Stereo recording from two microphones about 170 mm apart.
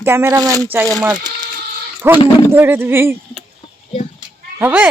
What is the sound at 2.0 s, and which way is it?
A woman's voice, 15° right (ahead or behind).